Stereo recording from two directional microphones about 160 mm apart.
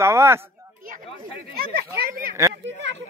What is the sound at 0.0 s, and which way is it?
Speech, 15° right (ahead or behind).